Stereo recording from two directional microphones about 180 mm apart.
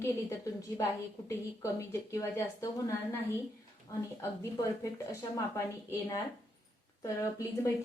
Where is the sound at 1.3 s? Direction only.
15° left (ahead or behind).